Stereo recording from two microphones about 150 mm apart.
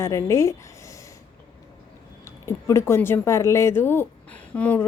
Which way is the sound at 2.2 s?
20° left (ahead or behind).